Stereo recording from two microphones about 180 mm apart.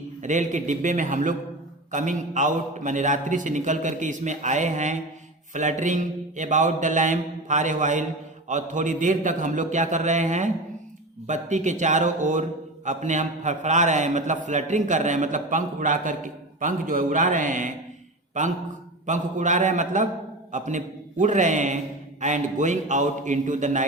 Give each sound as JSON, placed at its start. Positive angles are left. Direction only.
{"t": 0.2, "sound": "a man's voice", "side_deg": -45}